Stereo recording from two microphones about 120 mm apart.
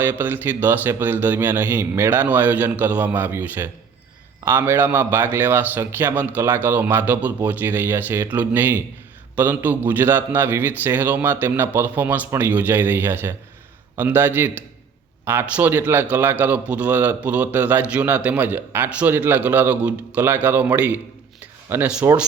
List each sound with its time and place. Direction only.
0.0 s a man's voice: 15° right (ahead or behind)